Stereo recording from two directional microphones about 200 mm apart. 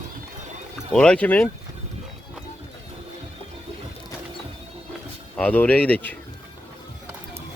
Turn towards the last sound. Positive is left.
turn(degrees=10)  # may be behind; listen again after turning